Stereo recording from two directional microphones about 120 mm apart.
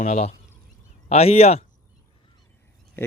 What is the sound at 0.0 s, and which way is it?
Speech, 80° left.